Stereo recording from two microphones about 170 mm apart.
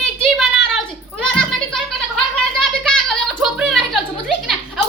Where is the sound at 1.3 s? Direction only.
5° left (ahead or behind).